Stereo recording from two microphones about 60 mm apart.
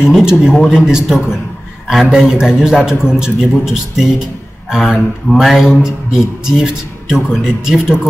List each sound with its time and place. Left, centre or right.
0.1 s a man's voice: centre